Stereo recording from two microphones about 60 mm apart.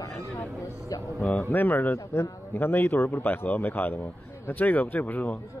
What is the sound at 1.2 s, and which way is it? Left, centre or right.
A man's voice, left.